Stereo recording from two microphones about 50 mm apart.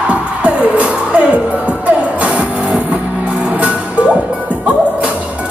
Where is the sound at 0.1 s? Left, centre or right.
Right.